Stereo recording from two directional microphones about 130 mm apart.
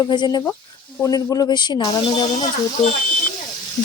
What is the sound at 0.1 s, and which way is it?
Speech, 35° left (ahead or behind).